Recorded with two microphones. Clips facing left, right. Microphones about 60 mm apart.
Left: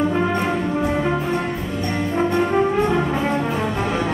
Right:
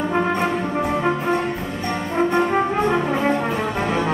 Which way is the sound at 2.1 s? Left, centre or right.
Right.